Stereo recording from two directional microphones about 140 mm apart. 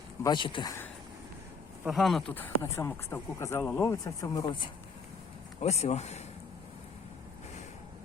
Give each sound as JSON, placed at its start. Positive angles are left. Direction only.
{"t": 0.2, "sound": "speech", "side_deg": 35}
{"t": 1.9, "sound": "speech", "side_deg": 0}
{"t": 2.3, "sound": "speech", "side_deg": 15}
{"t": 5.5, "sound": "speech", "side_deg": 50}